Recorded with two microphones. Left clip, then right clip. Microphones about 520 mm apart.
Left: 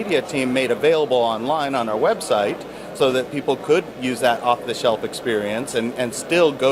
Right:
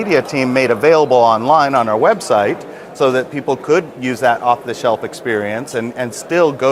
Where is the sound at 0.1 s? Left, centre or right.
Right.